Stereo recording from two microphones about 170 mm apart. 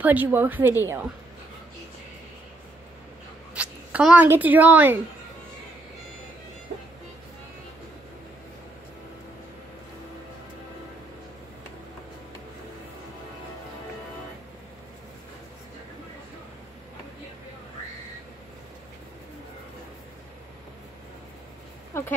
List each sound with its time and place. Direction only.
0.0 s a woman's voice: 10° right (ahead or behind)
3.5 s speech: 10° right (ahead or behind)
21.9 s a sound: 15° left (ahead or behind)